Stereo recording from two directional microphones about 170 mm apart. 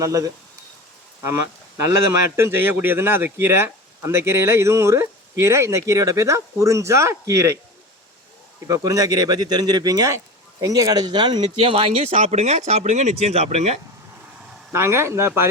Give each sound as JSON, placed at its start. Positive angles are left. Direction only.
{"t": 0.0, "sound": "speech", "side_deg": -20}
{"t": 2.1, "sound": "speech", "side_deg": -15}
{"t": 8.6, "sound": "speech", "side_deg": -20}
{"t": 14.7, "sound": "speech", "side_deg": -15}